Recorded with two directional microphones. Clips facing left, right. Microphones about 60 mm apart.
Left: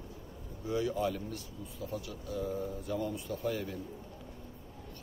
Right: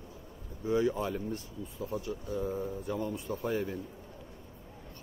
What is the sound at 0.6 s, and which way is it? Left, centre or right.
Speech, right.